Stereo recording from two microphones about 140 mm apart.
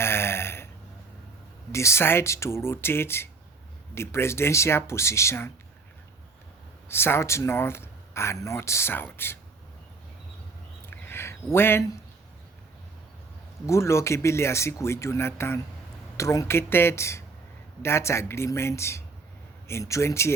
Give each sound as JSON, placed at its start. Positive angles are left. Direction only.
{"t": 0.0, "sound": "burping", "side_deg": 15}
{"t": 1.7, "sound": "speech", "side_deg": 20}
{"t": 6.8, "sound": "speech", "side_deg": 15}
{"t": 10.8, "sound": "a sound", "side_deg": 15}
{"t": 11.5, "sound": "speech", "side_deg": 15}
{"t": 13.7, "sound": "speech", "side_deg": 20}